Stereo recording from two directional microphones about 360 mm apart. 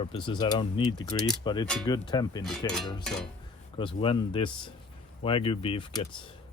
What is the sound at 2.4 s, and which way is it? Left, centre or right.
Speech, centre.